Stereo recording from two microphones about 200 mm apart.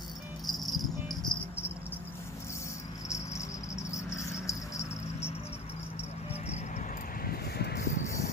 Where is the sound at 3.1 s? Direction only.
15° left (ahead or behind).